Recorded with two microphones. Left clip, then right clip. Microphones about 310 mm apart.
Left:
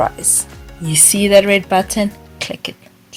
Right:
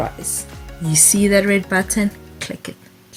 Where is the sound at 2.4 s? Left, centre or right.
Centre.